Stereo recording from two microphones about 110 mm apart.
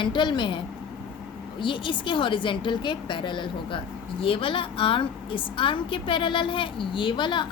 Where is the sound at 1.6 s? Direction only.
50° left (ahead or behind).